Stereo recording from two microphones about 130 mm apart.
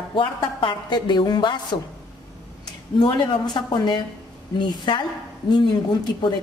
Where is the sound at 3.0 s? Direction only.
35° left (ahead or behind).